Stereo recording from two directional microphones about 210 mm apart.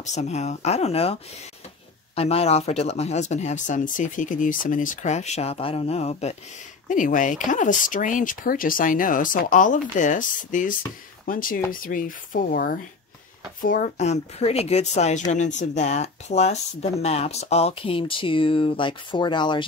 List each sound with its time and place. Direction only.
0.0 s speech: 35° left (ahead or behind)
2.1 s speech: 30° left (ahead or behind)